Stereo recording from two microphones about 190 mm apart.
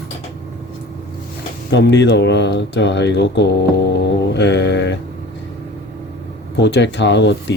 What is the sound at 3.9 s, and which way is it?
Mantra, 60° left (ahead or behind).